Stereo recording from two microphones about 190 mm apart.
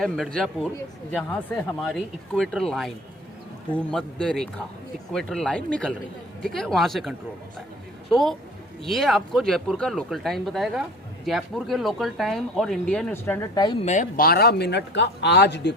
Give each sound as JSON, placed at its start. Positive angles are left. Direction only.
{"t": 0.0, "sound": "speech", "side_deg": 5}
{"t": 13.8, "sound": "speech", "side_deg": 40}